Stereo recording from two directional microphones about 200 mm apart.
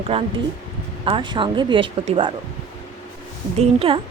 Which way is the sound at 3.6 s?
30° right (ahead or behind).